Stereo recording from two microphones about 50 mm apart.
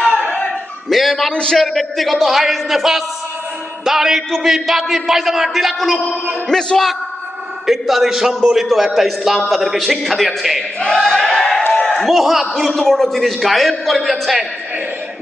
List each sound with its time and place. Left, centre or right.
0.8 s a man's voice: centre
1.3 s a man's voice: centre
1.6 s a man's voice: centre
6.4 s a man's voice: centre
11.0 s a sound: centre
12.0 s a man's voice: centre